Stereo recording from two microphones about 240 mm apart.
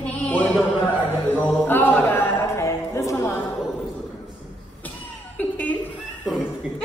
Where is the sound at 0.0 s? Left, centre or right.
Centre.